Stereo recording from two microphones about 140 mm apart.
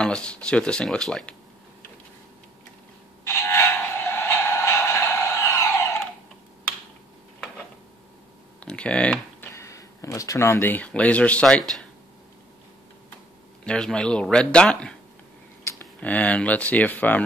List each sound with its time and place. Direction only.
0.0 s speech: 5° left (ahead or behind)
3.3 s a sound: 20° left (ahead or behind)
8.5 s typing: 10° left (ahead or behind)
9.5 s speech: 20° left (ahead or behind); by 11.8 s 5° left (ahead or behind)
13.7 s speech: 5° left (ahead or behind)
16.0 s speech: 10° left (ahead or behind)